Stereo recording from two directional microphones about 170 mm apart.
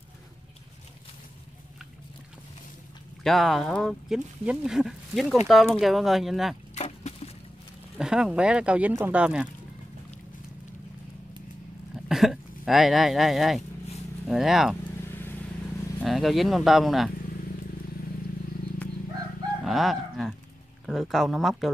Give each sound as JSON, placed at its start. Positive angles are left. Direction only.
{"t": 3.3, "sound": "speech", "side_deg": 0}
{"t": 6.7, "sound": "a sound", "side_deg": 40}
{"t": 8.0, "sound": "speech", "side_deg": -5}
{"t": 12.1, "sound": "speech", "side_deg": 0}
{"t": 16.0, "sound": "speech", "side_deg": 0}
{"t": 19.6, "sound": "fowl", "side_deg": 0}
{"t": 20.8, "sound": "speech", "side_deg": 0}